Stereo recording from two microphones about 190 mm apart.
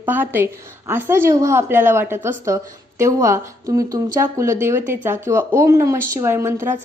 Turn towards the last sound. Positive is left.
turn(degrees=-15)  # may be behind; listen again after turning